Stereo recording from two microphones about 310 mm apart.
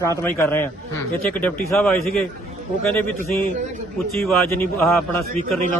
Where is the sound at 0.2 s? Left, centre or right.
Centre.